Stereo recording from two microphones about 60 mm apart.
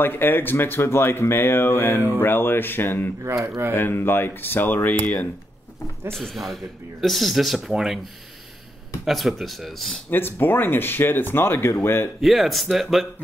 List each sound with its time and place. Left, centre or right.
0.0 s speech: left
6.0 s speech: centre
9.0 s speech: centre
10.0 s speech: left
12.2 s speech: centre